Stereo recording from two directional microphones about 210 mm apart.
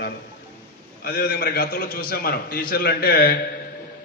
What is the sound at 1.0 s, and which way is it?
A man's voice, 45° left (ahead or behind).